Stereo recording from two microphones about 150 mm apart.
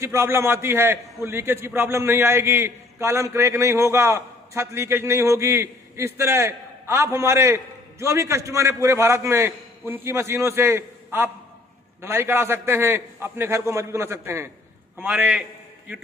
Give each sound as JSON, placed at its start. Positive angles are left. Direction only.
{"t": 0.0, "sound": "a man's voice", "side_deg": -15}
{"t": 15.0, "sound": "a man's voice", "side_deg": 0}